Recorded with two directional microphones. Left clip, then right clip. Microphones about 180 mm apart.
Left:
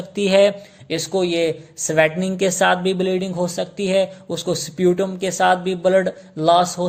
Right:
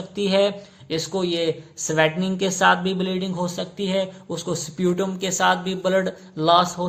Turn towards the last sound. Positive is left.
turn(degrees=35)  # may be behind; listen again after turning